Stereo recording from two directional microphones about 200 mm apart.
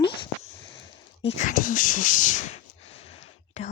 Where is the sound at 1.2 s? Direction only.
35° left (ahead or behind).